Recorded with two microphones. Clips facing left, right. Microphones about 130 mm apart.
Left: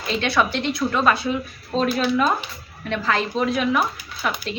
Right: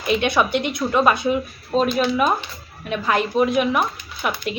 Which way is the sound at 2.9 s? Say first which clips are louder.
Right 3 dB; 15° right (ahead or behind).